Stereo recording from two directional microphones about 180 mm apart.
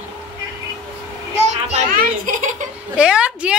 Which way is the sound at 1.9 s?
50° right (ahead or behind).